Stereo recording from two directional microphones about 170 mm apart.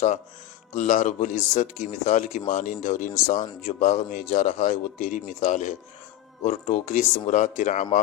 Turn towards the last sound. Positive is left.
turn(degrees=45)  # may be behind; listen again after turning